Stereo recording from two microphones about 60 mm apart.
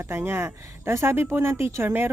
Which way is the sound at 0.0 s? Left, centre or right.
Right.